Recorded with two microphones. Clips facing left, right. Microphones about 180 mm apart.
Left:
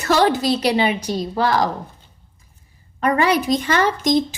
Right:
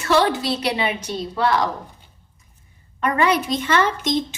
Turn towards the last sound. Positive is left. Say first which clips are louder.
# left 2 dB
turn(degrees=40)  # may be behind; listen again after turning